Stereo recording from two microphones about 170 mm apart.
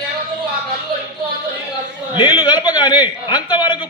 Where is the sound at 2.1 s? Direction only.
25° left (ahead or behind).